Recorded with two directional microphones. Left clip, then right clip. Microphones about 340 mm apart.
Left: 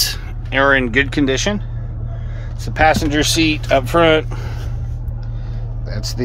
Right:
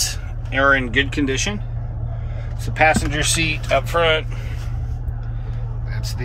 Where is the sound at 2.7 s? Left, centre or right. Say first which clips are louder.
Left 3 dB; centre.